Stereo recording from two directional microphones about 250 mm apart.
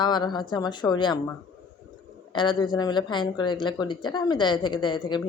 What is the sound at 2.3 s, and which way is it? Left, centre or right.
Speech, centre.